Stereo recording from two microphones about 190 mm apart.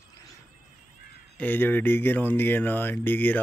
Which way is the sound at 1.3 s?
10° left (ahead or behind).